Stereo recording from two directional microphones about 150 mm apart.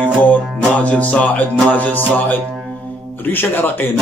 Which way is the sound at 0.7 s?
10° left (ahead or behind).